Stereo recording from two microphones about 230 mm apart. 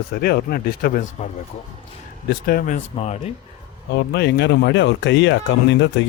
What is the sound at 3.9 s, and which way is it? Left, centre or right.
Speech, left.